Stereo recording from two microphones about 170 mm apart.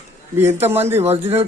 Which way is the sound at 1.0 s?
35° right (ahead or behind).